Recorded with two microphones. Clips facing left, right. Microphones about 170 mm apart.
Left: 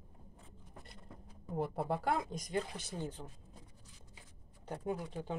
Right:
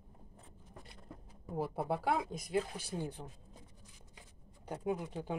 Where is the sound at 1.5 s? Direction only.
5° right (ahead or behind).